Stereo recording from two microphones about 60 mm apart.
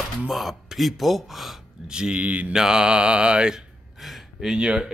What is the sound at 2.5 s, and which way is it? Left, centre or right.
A man's voice, centre.